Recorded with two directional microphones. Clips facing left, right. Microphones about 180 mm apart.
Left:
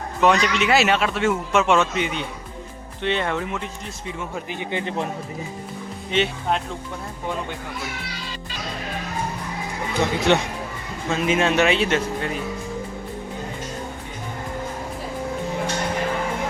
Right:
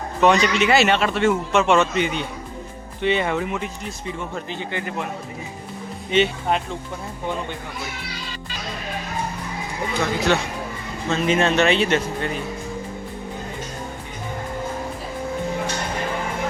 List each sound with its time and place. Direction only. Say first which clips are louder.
0.2 s a man's voice: right 2 dB; centre (ahead or behind)
6.1 s a man's voice: right 3 dB; centre (ahead or behind)
10.0 s speech: left 2 dB; 20° left (ahead or behind)
11.1 s a man's voice: right 1 dB; 5° left (ahead or behind)